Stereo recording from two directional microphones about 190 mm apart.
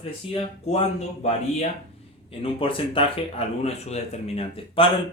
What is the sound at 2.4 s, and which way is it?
Speech, 25° left (ahead or behind).